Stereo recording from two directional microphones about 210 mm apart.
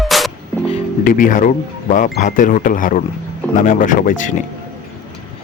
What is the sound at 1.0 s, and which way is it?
Speech, 40° left (ahead or behind).